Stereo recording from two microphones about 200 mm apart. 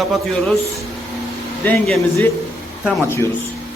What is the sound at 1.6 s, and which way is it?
Speech, 10° left (ahead or behind).